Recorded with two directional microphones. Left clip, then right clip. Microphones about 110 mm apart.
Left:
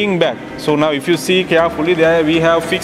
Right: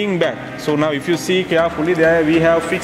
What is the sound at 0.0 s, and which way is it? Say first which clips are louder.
Speech: left 3 dB; 25° left (ahead or behind).